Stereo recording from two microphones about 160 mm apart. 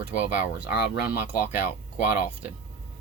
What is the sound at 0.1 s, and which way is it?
Speech, 10° right (ahead or behind).